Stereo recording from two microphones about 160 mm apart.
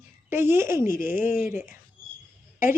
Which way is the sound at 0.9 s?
60° left (ahead or behind).